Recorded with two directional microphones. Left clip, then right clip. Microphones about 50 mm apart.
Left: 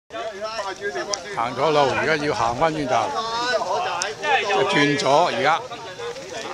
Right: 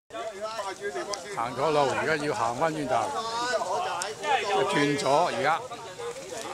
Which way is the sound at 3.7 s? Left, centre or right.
Left.